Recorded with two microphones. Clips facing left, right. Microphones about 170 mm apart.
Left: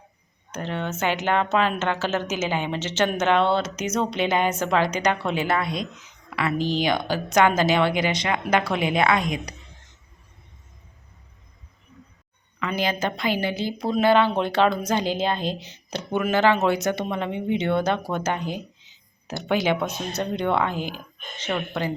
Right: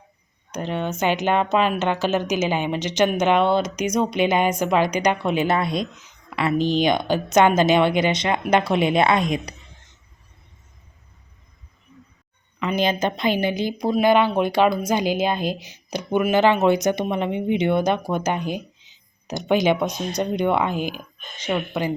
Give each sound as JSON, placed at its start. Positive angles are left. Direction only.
{"t": 0.5, "sound": "a woman's voice", "side_deg": -15}
{"t": 12.5, "sound": "a woman's voice", "side_deg": -20}